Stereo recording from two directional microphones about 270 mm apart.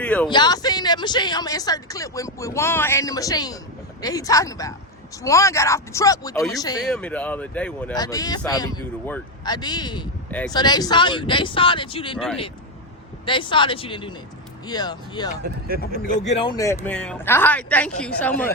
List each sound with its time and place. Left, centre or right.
0.0 s speech: centre
0.3 s speech: centre
13.2 s speech: centre
15.4 s speech: right
16.0 s speech: left
16.4 s a woman's voice: centre